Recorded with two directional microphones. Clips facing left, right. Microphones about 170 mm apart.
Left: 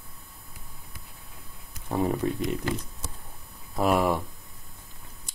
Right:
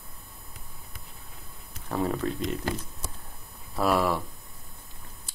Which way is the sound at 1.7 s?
15° left (ahead or behind).